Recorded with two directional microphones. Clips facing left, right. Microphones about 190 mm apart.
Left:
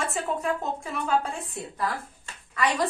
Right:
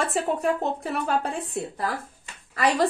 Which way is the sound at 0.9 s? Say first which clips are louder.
Left 2 dB; 60° right (ahead or behind).